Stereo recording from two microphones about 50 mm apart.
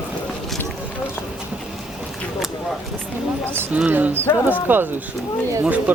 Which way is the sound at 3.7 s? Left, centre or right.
Right.